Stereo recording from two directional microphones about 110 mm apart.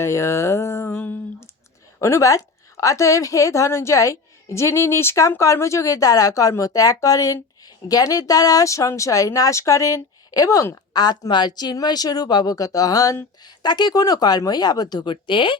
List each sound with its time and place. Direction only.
0.0 s a woman's voice: 25° left (ahead or behind); by 15.5 s 50° left (ahead or behind)